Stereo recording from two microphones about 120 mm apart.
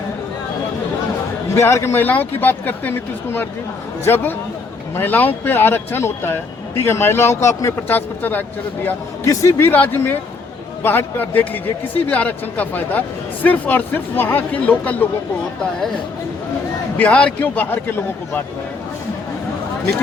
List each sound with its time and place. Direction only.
1.5 s a man's voice: 20° left (ahead or behind)
17.0 s a man's voice: 10° left (ahead or behind)